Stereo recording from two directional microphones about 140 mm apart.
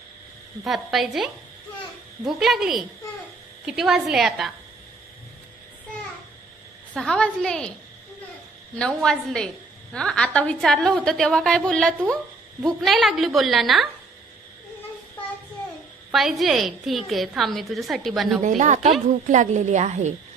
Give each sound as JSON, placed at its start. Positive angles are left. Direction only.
{"t": 0.7, "sound": "a woman's voice", "side_deg": 0}
{"t": 7.0, "sound": "a woman's voice", "side_deg": 5}
{"t": 8.7, "sound": "a woman's voice", "side_deg": 5}
{"t": 16.1, "sound": "a woman's voice", "side_deg": 0}
{"t": 18.4, "sound": "a woman's voice", "side_deg": -60}